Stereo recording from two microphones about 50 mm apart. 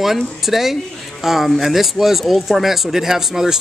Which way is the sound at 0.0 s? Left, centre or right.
Centre.